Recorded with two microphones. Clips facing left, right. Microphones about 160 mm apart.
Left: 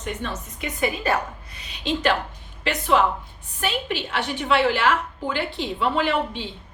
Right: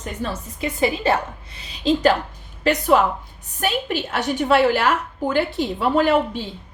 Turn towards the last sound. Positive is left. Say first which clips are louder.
# right 5 dB
turn(degrees=-40)  # may be behind; listen again after turning